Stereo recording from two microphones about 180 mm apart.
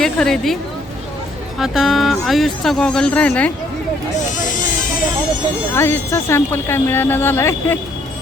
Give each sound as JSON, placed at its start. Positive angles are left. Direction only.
{"t": 0.0, "sound": "speech", "side_deg": 0}
{"t": 1.5, "sound": "speech", "side_deg": 0}
{"t": 4.4, "sound": "goat", "side_deg": 45}
{"t": 5.7, "sound": "speech", "side_deg": 15}